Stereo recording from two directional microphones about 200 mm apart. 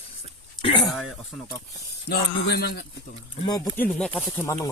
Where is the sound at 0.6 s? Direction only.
25° left (ahead or behind).